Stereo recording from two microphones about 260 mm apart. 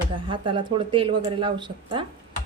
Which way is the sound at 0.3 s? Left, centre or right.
Centre.